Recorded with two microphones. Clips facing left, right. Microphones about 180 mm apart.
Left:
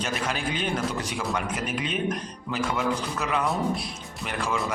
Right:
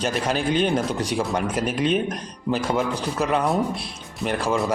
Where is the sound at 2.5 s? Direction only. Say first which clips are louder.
Right 4 dB; 35° right (ahead or behind).